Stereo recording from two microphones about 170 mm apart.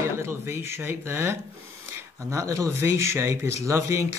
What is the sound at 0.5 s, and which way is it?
Speech, 15° right (ahead or behind).